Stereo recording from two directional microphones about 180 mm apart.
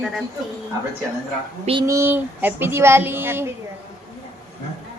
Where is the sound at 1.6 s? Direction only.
30° right (ahead or behind).